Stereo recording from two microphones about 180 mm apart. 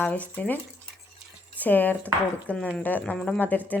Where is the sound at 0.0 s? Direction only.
10° left (ahead or behind).